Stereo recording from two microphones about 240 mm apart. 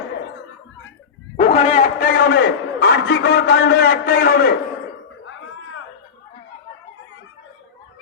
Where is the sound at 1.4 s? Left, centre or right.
Left.